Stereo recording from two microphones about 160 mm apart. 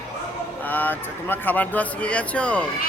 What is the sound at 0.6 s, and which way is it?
Speech, 10° left (ahead or behind).